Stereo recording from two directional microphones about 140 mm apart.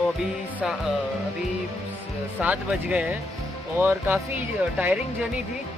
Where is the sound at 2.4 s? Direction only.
10° right (ahead or behind).